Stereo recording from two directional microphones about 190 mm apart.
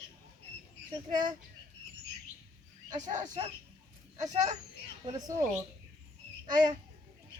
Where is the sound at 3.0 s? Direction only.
40° right (ahead or behind).